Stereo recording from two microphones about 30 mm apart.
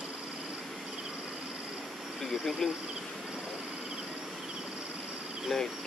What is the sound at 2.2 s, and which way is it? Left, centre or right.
Speech, centre.